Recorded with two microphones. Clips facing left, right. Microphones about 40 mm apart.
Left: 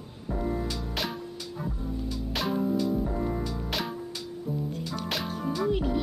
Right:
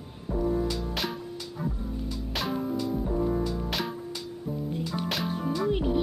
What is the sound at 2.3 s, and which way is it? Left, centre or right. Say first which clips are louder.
Music: left 3 dB; centre.